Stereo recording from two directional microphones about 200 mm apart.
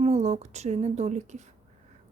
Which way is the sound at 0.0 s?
35° right (ahead or behind).